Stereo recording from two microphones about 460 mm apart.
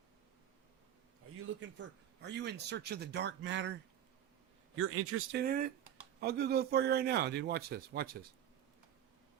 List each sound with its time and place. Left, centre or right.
1.5 s speech: right